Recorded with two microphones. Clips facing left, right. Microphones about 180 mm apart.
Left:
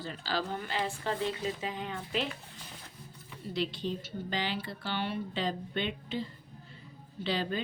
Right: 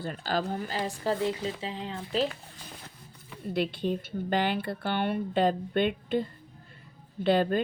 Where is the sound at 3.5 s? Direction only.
55° right (ahead or behind).